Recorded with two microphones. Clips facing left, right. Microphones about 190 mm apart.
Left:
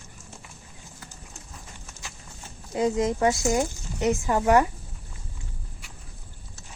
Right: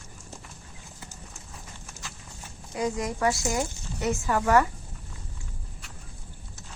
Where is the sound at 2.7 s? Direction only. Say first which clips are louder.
Left 5 dB; 25° left (ahead or behind).